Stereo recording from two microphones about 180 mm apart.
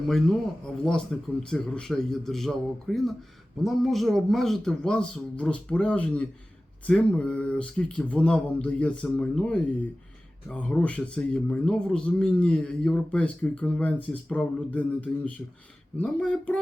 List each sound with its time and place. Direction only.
0.8 s speech: 5° left (ahead or behind)